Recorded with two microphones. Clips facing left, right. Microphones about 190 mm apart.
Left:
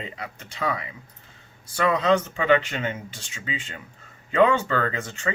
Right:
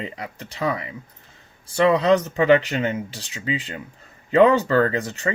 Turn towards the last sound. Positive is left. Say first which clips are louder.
# right 7 dB
turn(degrees=-35)  # may be behind; listen again after turning